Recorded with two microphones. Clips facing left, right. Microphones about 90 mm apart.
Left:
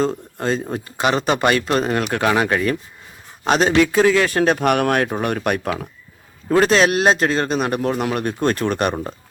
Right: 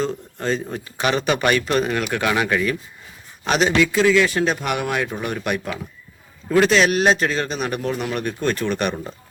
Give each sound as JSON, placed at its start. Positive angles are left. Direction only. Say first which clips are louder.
{"t": 0.0, "sound": "a man's voice", "louder": "left 3 dB", "side_deg": 40}
{"t": 1.0, "sound": "a man's voice", "louder": "left 2 dB", "side_deg": 30}
{"t": 3.8, "sound": "a man's voice", "louder": "even", "side_deg": 40}